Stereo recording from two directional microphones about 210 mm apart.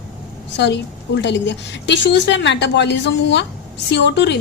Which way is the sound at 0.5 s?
55° left (ahead or behind).